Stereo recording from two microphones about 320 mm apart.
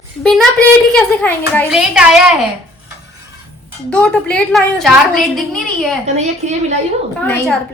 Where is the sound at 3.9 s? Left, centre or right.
Centre.